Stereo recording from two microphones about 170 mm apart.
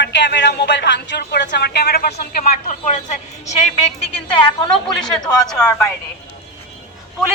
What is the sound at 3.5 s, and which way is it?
Speech, 40° left (ahead or behind).